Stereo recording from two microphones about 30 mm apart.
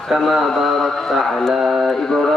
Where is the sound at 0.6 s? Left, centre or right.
Centre.